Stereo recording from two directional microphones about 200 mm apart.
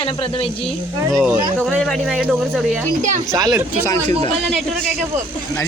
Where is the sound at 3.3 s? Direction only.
20° right (ahead or behind).